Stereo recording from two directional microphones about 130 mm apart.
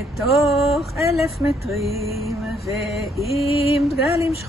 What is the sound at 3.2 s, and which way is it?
Mantra, 50° left (ahead or behind).